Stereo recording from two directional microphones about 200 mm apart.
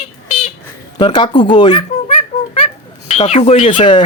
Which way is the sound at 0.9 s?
20° left (ahead or behind).